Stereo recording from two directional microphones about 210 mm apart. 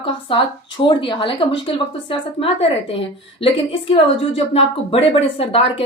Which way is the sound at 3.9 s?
25° left (ahead or behind).